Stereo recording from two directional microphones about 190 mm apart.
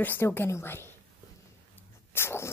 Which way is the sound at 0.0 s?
10° left (ahead or behind).